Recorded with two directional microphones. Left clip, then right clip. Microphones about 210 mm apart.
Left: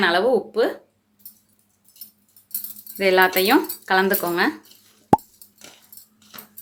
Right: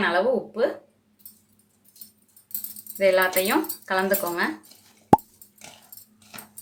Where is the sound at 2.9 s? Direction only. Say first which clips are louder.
Left 3 dB; 40° left (ahead or behind).